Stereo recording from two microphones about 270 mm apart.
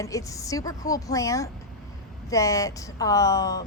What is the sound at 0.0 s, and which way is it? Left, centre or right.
A woman's voice, centre.